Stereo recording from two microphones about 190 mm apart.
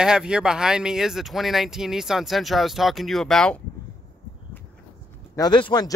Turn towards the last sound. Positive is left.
turn(degrees=25)  # may be behind; listen again after turning